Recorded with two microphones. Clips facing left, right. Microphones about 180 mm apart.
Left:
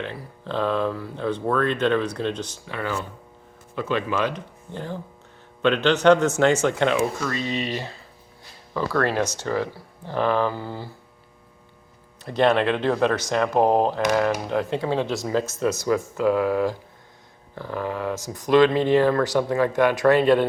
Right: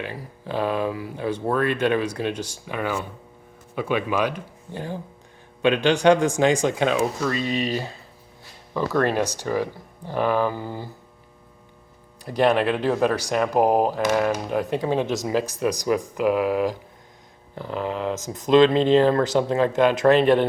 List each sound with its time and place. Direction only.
0.0 s speech: 10° right (ahead or behind)
7.3 s speech: 20° left (ahead or behind)
8.7 s speech: 15° right (ahead or behind)
12.2 s speech: 10° right (ahead or behind)